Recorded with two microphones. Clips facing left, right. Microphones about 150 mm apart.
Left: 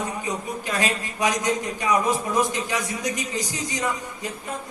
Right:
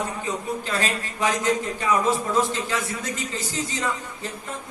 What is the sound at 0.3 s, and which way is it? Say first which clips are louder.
A man's voice: right 1 dB; 15° left (ahead or behind).